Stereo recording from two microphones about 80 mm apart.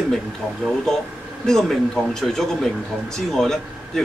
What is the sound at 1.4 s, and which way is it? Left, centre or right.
A man's voice, centre.